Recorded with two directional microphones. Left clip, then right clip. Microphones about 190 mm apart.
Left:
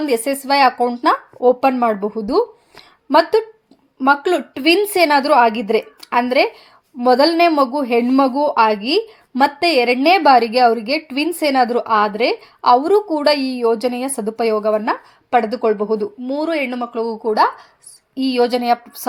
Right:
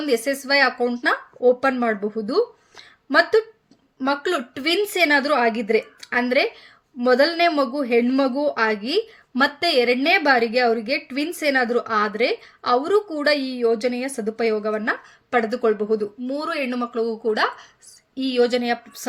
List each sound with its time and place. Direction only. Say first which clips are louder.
0.1 s a woman's voice: left 1 dB; 15° left (ahead or behind)